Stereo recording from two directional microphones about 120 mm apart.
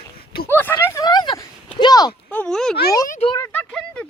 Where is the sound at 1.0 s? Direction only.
35° left (ahead or behind).